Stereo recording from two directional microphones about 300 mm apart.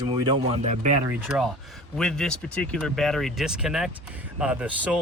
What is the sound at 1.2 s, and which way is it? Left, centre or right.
Speech, centre.